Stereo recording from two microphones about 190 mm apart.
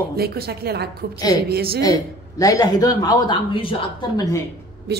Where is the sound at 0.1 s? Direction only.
55° right (ahead or behind).